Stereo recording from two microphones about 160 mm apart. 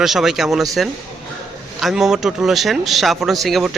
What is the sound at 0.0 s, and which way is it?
A man's voice, centre (ahead or behind).